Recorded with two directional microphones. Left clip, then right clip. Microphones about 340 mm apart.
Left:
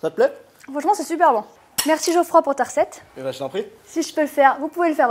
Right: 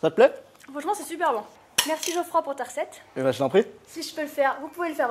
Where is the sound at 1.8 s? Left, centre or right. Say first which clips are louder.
Left 9 dB; left.